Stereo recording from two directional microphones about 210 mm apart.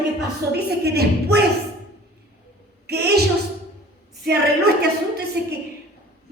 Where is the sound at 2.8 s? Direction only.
50° right (ahead or behind).